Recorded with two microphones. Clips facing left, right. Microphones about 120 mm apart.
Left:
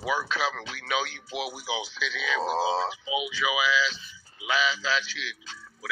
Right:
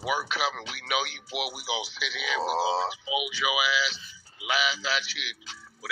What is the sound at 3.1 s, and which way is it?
Speech, 15° right (ahead or behind).